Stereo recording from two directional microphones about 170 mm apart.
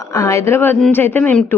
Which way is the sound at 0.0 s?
20° left (ahead or behind).